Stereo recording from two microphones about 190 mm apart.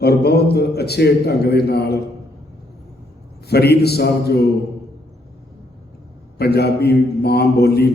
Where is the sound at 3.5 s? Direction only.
60° left (ahead or behind).